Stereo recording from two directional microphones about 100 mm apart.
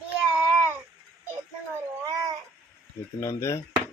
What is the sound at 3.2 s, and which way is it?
Speech, 30° left (ahead or behind).